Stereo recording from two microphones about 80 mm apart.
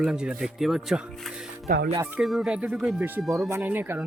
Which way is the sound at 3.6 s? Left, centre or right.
Right.